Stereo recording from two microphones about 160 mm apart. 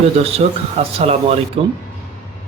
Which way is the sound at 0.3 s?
40° right (ahead or behind).